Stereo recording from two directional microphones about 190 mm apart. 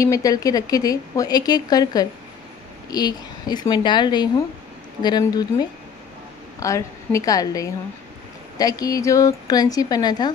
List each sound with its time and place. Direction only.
0.0 s a woman's voice: 15° left (ahead or behind)